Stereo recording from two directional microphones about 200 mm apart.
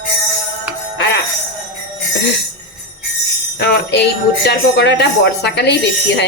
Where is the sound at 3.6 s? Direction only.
55° left (ahead or behind).